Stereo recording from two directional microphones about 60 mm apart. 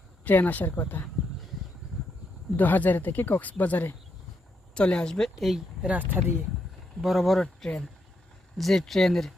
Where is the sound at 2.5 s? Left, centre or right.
Left.